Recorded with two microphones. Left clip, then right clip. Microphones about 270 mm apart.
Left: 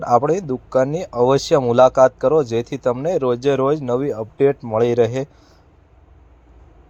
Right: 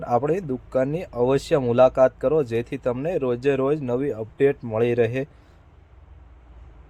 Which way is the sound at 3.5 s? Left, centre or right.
Centre.